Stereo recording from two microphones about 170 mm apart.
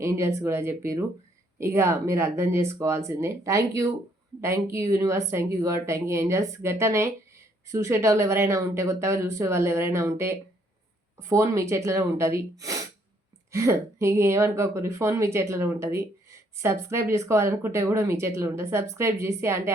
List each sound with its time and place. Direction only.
0.0 s speech: 15° right (ahead or behind)